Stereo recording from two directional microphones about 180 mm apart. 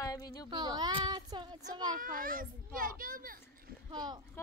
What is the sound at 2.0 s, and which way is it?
A child's voice, 50° right (ahead or behind).